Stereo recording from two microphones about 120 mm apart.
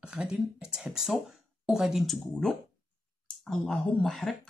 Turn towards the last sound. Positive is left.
turn(degrees=5)  # may be behind; listen again after turning